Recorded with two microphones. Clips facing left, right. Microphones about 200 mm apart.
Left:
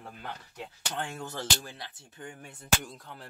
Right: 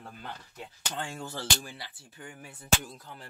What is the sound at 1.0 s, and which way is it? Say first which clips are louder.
Speech: left 1 dB; 20° left (ahead or behind).